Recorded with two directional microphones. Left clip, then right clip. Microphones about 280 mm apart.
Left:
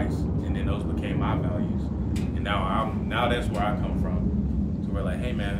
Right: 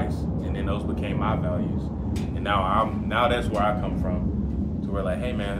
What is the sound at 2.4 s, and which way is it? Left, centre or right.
Speech, centre.